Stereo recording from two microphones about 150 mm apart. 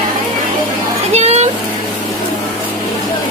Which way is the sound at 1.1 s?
45° right (ahead or behind).